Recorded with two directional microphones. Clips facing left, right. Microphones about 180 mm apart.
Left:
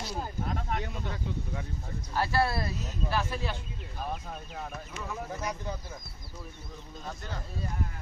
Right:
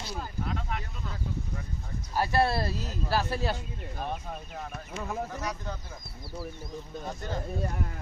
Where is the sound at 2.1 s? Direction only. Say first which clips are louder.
Right 2 dB; 15° right (ahead or behind).